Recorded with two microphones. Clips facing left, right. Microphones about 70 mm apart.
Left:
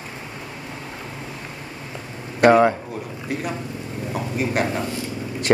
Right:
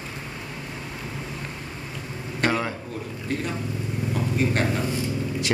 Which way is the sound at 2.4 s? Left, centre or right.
Left.